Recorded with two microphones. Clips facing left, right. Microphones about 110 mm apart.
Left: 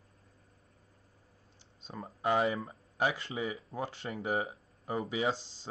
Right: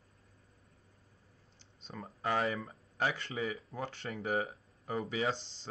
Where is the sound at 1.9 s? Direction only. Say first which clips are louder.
Left 4 dB; 15° left (ahead or behind).